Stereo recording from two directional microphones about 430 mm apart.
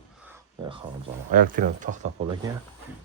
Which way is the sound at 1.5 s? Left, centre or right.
Centre.